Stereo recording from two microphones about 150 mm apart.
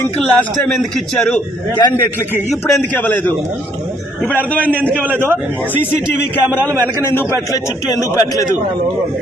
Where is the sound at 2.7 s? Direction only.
10° left (ahead or behind).